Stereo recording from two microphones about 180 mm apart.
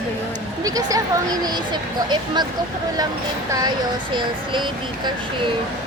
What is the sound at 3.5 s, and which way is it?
Speech, 20° right (ahead or behind).